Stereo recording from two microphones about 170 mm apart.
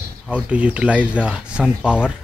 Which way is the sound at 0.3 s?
5° right (ahead or behind).